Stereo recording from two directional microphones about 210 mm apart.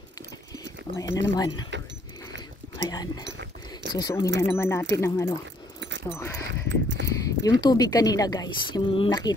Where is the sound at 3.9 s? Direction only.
15° left (ahead or behind).